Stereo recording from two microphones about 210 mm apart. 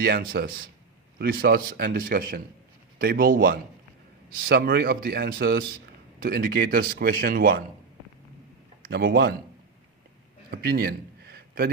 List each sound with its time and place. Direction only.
0.0 s speech: 45° right (ahead or behind)
8.8 s a man's voice: 50° right (ahead or behind)
10.5 s a sound: 45° right (ahead or behind)